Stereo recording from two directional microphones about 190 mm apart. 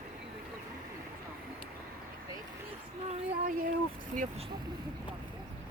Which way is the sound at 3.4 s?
50° right (ahead or behind).